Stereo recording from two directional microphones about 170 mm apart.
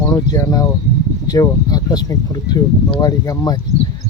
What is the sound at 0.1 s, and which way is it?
Speech, 20° left (ahead or behind).